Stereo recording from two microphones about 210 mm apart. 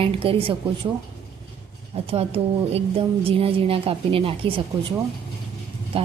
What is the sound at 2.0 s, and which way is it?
A woman's voice, 25° right (ahead or behind).